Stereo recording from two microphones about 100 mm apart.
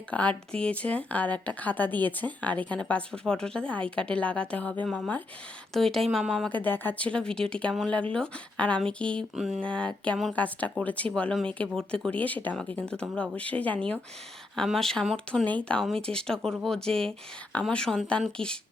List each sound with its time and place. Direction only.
0.1 s speech: 10° left (ahead or behind)
6.1 s speech: 5° right (ahead or behind)
6.5 s speech: 20° left (ahead or behind)
9.3 s speech: 10° right (ahead or behind)
9.6 s speech: 10° left (ahead or behind)
15.4 s speech: 15° left (ahead or behind)